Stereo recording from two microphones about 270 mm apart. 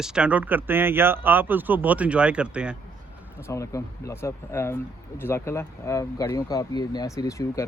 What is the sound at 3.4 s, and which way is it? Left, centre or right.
Speech, centre.